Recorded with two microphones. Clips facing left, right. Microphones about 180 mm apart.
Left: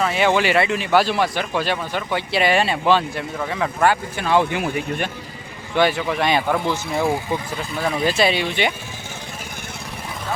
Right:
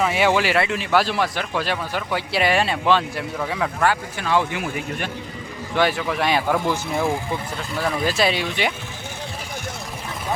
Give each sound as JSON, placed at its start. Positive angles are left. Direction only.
{"t": 0.0, "sound": "speech", "side_deg": -10}
{"t": 3.8, "sound": "speech", "side_deg": 20}
{"t": 5.7, "sound": "speech", "side_deg": 0}